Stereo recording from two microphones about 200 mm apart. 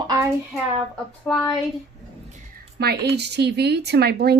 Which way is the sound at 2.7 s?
55° right (ahead or behind).